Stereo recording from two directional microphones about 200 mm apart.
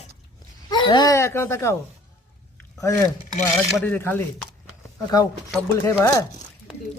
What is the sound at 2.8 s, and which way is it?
Speech, 15° left (ahead or behind).